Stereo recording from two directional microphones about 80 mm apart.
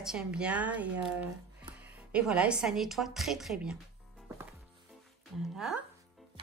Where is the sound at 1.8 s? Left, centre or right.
Centre.